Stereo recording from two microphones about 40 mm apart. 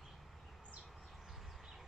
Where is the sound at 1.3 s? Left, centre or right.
Centre.